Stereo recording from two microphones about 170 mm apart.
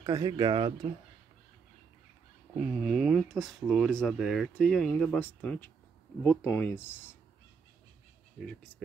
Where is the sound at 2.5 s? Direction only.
5° right (ahead or behind); by 6.8 s 10° left (ahead or behind).